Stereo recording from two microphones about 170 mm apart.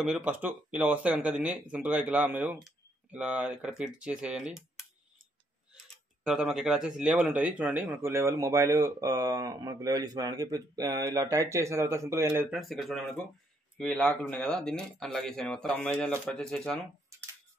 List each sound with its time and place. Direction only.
0.0 s speech: 5° right (ahead or behind)
6.2 s speech: 5° right (ahead or behind)
12.5 s speech: centre (ahead or behind)